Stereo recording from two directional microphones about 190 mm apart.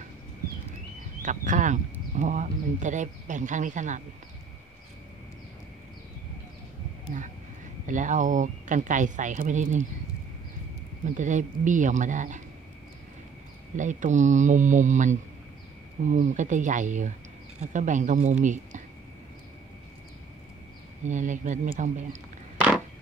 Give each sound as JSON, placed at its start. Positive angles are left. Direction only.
{"t": 1.2, "sound": "speech", "side_deg": -40}
{"t": 7.8, "sound": "speech", "side_deg": -40}
{"t": 11.1, "sound": "speech", "side_deg": -40}
{"t": 13.7, "sound": "speech", "side_deg": -40}
{"t": 21.0, "sound": "speech", "side_deg": -40}